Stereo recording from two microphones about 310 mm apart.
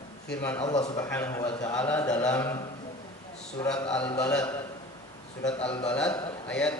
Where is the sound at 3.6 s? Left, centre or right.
Centre.